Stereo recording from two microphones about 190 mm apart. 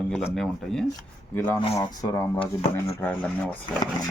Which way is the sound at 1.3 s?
10° left (ahead or behind).